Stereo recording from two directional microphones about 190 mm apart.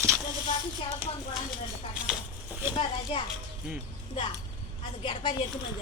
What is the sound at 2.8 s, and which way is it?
Speech, 30° left (ahead or behind).